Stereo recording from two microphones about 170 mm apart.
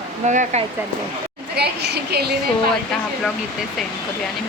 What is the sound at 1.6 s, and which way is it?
Speech, 75° right (ahead or behind).